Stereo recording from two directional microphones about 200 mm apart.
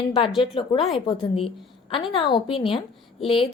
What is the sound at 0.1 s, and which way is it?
A woman's voice, 25° left (ahead or behind).